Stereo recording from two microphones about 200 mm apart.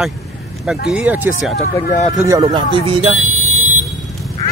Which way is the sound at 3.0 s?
35° right (ahead or behind).